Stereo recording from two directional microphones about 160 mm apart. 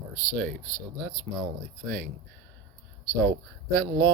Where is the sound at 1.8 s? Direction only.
75° right (ahead or behind).